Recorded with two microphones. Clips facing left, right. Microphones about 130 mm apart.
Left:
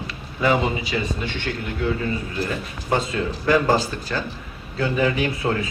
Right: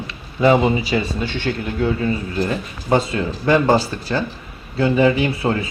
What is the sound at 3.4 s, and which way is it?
Speech, 30° right (ahead or behind).